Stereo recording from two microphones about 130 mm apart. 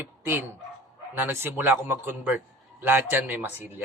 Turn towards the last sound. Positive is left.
turn(degrees=-15)  # may be behind; listen again after turning